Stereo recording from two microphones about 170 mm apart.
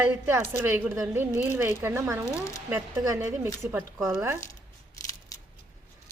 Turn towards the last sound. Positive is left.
turn(degrees=20)  # may be behind; listen again after turning